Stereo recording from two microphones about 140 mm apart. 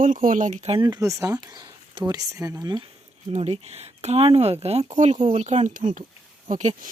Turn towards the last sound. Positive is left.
turn(degrees=-55)  # may be behind; listen again after turning